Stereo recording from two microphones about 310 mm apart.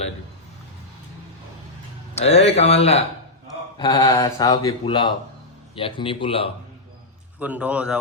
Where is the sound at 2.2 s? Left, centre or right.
Centre.